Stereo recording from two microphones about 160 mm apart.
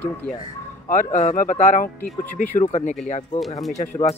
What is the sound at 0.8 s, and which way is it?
Speech, 55° left (ahead or behind).